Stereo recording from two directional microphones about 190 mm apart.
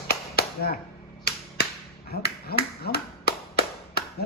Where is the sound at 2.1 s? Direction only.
55° left (ahead or behind).